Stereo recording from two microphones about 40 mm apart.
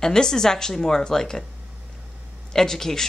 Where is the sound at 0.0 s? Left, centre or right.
Centre.